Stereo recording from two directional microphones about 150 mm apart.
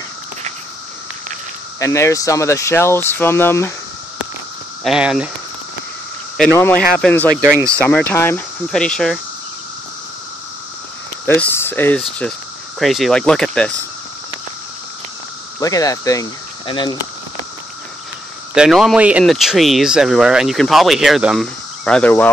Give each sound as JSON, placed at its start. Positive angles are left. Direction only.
{"t": 1.8, "sound": "speech", "side_deg": 20}
{"t": 4.8, "sound": "speech", "side_deg": -5}
{"t": 6.5, "sound": "speech", "side_deg": 15}
{"t": 7.4, "sound": "speech", "side_deg": -20}
{"t": 7.7, "sound": "speech", "side_deg": 10}
{"t": 11.2, "sound": "speech", "side_deg": 15}
{"t": 12.2, "sound": "speech", "side_deg": 5}
{"t": 15.6, "sound": "speech", "side_deg": 25}
{"t": 18.5, "sound": "speech", "side_deg": -5}